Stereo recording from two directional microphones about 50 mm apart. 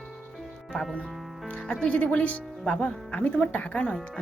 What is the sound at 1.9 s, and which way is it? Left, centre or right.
Speech, left.